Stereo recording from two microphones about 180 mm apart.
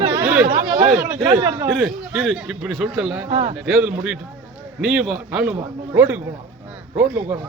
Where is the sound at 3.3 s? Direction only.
35° right (ahead or behind).